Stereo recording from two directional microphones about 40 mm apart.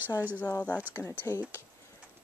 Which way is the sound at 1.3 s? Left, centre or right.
Left.